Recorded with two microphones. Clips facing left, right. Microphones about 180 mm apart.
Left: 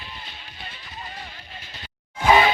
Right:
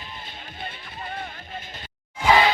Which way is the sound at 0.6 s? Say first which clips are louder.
Right 3 dB; 55° right (ahead or behind).